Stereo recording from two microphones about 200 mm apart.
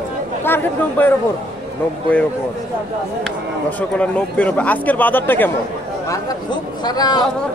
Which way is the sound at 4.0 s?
5° left (ahead or behind).